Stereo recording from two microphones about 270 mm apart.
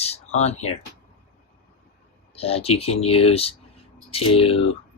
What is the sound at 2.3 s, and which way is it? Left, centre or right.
Speech, left.